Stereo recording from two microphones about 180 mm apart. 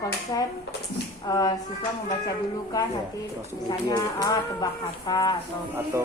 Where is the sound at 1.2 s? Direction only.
20° left (ahead or behind).